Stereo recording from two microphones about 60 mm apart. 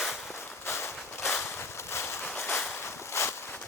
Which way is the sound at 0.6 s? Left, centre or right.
Left.